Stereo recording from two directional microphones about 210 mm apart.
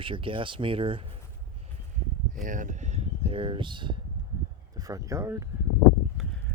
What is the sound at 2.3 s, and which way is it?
Speech, 40° right (ahead or behind).